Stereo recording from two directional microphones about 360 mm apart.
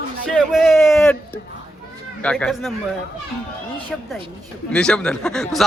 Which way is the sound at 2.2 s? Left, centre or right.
Centre.